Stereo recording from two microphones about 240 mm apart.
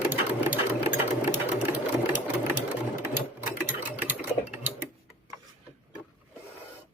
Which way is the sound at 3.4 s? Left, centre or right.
Left.